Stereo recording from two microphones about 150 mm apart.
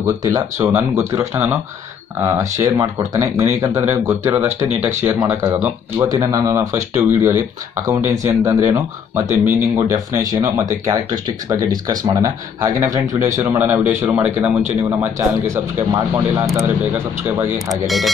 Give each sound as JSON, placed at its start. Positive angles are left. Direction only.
{"t": 0.0, "sound": "speech", "side_deg": -20}
{"t": 4.6, "sound": "speech", "side_deg": -50}
{"t": 5.0, "sound": "speech", "side_deg": -10}
{"t": 6.1, "sound": "speech", "side_deg": -25}
{"t": 17.8, "sound": "speech", "side_deg": 0}